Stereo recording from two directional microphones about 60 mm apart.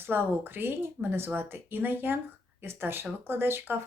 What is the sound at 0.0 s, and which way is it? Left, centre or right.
Speech, right.